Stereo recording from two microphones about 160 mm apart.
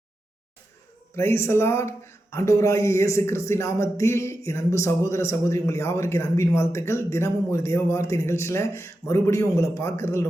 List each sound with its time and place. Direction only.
1.1 s speech: 15° left (ahead or behind)